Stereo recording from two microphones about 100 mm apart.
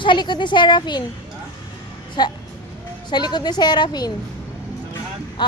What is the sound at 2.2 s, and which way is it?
A woman's voice, 45° left (ahead or behind).